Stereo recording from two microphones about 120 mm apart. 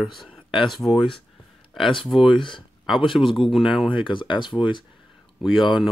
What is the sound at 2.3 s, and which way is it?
Speech, 45° left (ahead or behind).